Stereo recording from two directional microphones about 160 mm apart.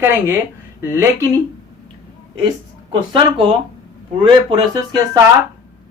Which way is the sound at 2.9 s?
30° right (ahead or behind).